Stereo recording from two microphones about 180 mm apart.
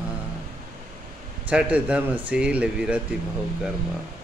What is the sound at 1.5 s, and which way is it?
Speech, 5° right (ahead or behind).